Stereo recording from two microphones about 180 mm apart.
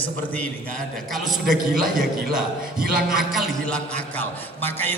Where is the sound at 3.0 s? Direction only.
5° right (ahead or behind).